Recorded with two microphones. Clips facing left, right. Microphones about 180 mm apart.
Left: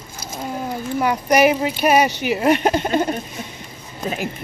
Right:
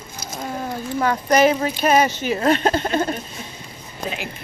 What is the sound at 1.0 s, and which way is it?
Speech, 15° left (ahead or behind).